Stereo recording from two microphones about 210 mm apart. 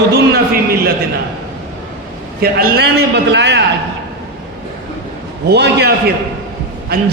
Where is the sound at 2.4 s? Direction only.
45° right (ahead or behind).